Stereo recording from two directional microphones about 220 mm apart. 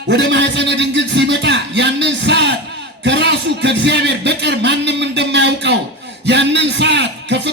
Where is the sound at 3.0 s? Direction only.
50° right (ahead or behind).